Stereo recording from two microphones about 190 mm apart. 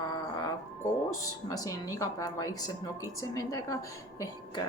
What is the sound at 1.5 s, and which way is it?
A woman's voice, 20° left (ahead or behind).